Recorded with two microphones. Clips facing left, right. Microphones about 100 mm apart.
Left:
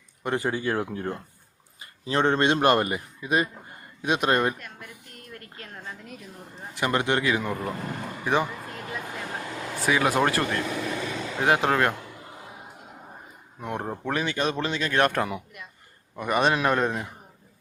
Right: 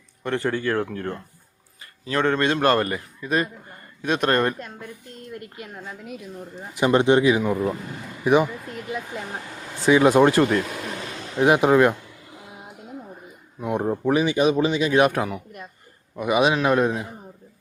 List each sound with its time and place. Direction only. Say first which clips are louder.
0.2 s a man's voice: right 2 dB; 15° left (ahead or behind)
5.1 s speech: right 8 dB; 20° right (ahead or behind); by 6.1 s 5° right (ahead or behind)
6.7 s speech: right 7 dB; 20° right (ahead or behind)
13.6 s a man's voice: right 7 dB; 10° right (ahead or behind)